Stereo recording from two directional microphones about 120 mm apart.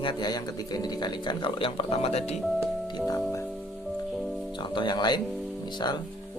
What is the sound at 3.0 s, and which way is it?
Speech, 25° left (ahead or behind).